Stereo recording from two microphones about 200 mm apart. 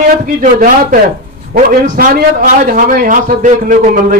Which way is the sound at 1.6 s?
45° right (ahead or behind).